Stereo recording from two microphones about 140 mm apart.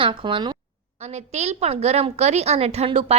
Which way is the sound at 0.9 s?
50° right (ahead or behind).